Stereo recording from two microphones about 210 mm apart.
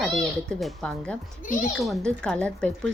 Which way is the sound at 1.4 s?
40° left (ahead or behind).